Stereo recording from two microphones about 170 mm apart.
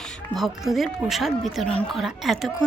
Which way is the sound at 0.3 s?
Centre (ahead or behind).